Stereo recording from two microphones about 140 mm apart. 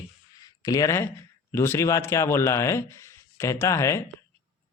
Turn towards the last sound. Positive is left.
turn(degrees=20)  # may be behind; listen again after turning